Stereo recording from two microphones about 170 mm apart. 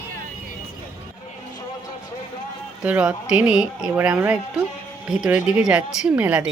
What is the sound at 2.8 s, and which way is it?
Speech, 10° right (ahead or behind).